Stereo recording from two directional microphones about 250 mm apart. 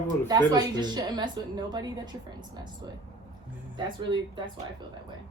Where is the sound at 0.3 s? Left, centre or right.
Centre.